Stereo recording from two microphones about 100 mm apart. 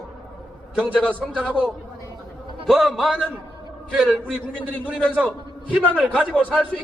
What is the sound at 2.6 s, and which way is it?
A man's voice, centre (ahead or behind).